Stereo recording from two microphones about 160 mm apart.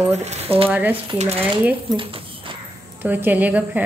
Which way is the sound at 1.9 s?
30° right (ahead or behind).